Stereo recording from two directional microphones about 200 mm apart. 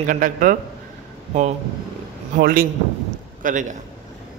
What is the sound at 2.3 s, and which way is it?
A man's voice, 45° right (ahead or behind).